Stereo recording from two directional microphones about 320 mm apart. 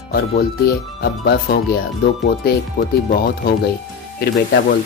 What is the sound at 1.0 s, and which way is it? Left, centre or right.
Speech, left.